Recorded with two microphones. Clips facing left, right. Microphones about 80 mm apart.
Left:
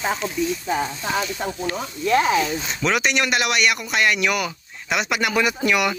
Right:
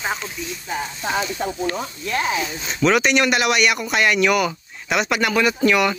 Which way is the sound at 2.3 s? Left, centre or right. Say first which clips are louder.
Left 4 dB; centre.